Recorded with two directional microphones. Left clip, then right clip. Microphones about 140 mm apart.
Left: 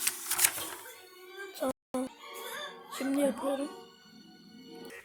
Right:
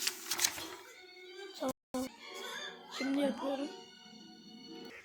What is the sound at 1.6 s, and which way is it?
Music, 15° left (ahead or behind).